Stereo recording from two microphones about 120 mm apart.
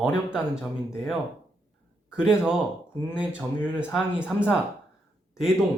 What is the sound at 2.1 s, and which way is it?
Speech, 5° right (ahead or behind).